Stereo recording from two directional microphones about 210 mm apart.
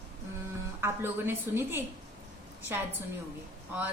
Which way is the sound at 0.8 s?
10° right (ahead or behind).